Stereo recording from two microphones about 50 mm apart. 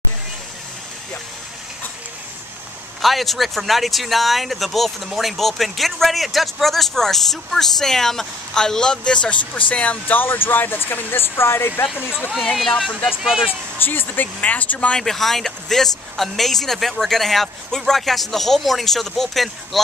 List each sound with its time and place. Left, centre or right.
3.0 s speech: centre; by 11.8 s left
12.5 s speech: centre
13.1 s speech: centre
13.7 s speech: left
15.0 s speech: centre